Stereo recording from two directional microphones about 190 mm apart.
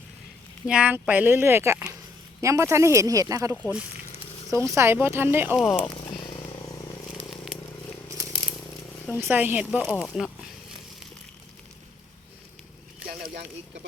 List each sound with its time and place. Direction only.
0.7 s speech: 5° right (ahead or behind)
5.5 s speech: centre (ahead or behind)
7.2 s a sound: centre (ahead or behind)
9.0 s a woman's voice: 5° left (ahead or behind)
9.3 s speech: 10° right (ahead or behind)
13.1 s a sound: 50° right (ahead or behind)